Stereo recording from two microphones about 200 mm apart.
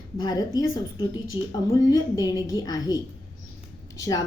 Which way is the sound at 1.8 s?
15° left (ahead or behind).